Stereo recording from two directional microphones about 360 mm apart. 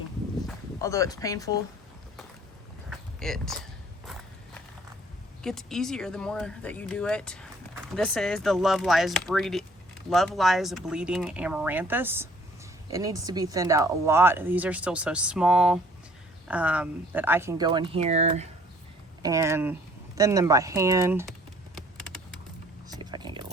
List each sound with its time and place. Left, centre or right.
0.4 s speech: centre
2.9 s walk: centre
5.4 s speech: centre
22.9 s a sound: centre